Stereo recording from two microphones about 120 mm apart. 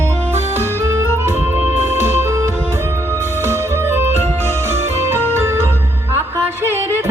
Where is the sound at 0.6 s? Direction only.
20° right (ahead or behind).